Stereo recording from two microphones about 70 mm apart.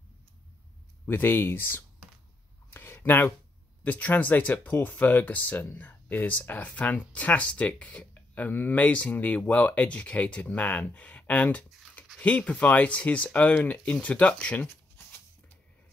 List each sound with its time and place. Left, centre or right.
1.0 s speech: left
2.7 s a sound: left
3.8 s speech: left